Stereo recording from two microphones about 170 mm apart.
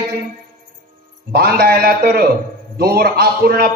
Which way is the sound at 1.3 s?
65° right (ahead or behind).